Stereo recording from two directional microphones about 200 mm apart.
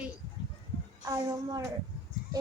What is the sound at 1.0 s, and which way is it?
Speech, 15° right (ahead or behind).